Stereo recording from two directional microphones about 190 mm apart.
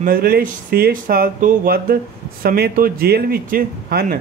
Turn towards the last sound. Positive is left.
turn(degrees=-50)  # may be behind; listen again after turning